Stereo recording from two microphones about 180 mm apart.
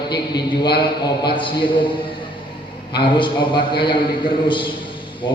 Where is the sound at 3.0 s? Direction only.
25° left (ahead or behind).